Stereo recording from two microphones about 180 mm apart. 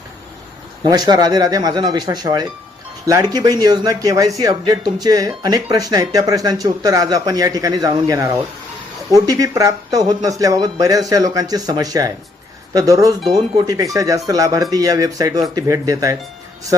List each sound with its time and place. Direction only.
0.9 s speech: 25° right (ahead or behind)